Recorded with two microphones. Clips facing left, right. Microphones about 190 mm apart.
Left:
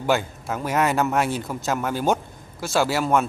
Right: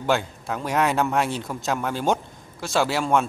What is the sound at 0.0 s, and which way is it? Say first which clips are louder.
A man's voice: left 1 dB; 5° left (ahead or behind).